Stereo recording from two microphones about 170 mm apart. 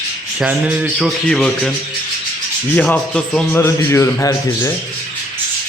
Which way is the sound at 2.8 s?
5° left (ahead or behind).